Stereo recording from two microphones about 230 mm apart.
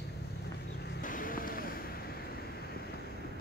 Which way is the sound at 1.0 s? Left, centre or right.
Left.